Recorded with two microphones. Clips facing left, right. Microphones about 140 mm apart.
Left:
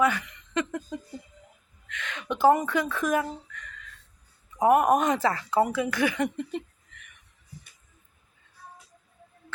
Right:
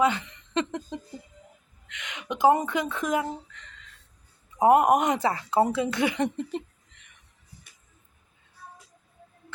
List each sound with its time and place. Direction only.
0.0 s speech: 25° right (ahead or behind)